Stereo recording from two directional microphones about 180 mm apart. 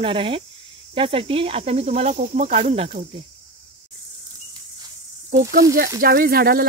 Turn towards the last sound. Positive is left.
turn(degrees=-60)  # may be behind; listen again after turning